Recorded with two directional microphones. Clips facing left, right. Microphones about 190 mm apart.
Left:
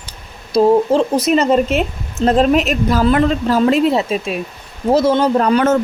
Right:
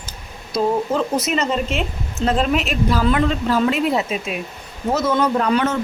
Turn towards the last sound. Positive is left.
turn(degrees=45)  # may be behind; listen again after turning